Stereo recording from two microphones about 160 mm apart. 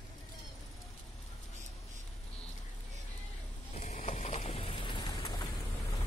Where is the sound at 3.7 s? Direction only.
45° left (ahead or behind); by 5.4 s 30° left (ahead or behind).